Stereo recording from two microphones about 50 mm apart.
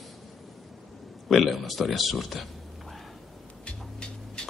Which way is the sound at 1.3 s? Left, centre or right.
Centre.